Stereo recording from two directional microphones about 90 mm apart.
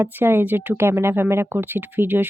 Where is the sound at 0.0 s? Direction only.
25° right (ahead or behind).